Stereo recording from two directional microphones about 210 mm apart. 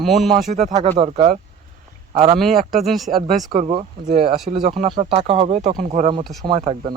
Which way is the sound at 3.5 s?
25° right (ahead or behind).